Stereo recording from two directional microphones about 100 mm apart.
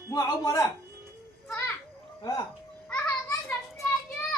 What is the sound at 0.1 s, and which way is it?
Speech, 35° left (ahead or behind).